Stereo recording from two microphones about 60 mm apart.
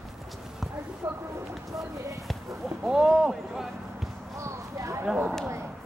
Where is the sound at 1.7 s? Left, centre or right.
Right.